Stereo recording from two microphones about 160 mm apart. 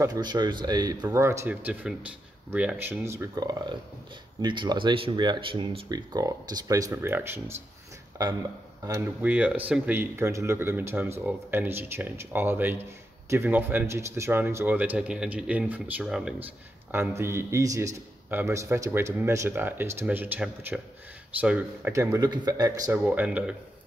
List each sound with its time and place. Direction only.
0.0 s a man's voice: 25° right (ahead or behind)
8.8 s speech: 20° right (ahead or behind)
9.2 s a man's voice: 10° right (ahead or behind)
16.9 s a man's voice: 15° right (ahead or behind)
23.0 s a man's voice: 10° right (ahead or behind)